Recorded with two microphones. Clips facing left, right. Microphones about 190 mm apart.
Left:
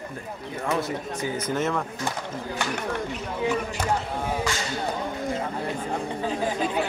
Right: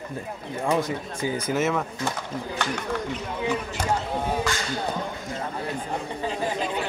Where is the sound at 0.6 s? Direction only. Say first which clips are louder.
Right 2 dB; 15° right (ahead or behind).